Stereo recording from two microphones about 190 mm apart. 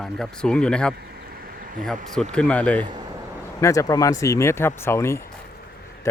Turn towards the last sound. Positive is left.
turn(degrees=15)  # may be behind; listen again after turning